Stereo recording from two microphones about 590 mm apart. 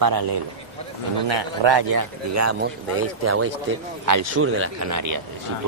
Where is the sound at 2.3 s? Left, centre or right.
Right.